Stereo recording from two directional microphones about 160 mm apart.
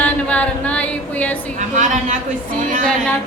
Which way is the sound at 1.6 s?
50° right (ahead or behind).